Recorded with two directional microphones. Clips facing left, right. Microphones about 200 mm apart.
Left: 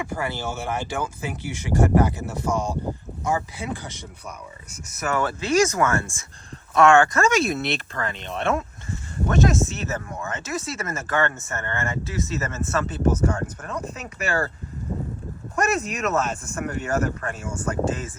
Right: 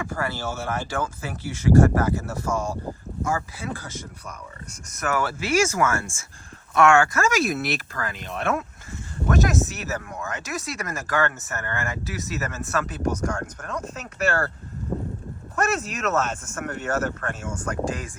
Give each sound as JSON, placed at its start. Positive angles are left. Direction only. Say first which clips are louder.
{"t": 0.0, "sound": "speech", "louder": "left 1 dB", "side_deg": 15}
{"t": 5.7, "sound": "speech", "louder": "left 1 dB", "side_deg": 20}
{"t": 7.1, "sound": "speech", "louder": "left 2 dB", "side_deg": 0}
{"t": 15.6, "sound": "speech", "louder": "left 1 dB", "side_deg": 10}